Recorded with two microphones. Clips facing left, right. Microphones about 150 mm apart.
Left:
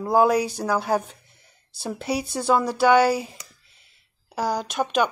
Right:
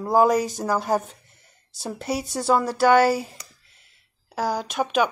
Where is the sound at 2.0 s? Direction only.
10° left (ahead or behind).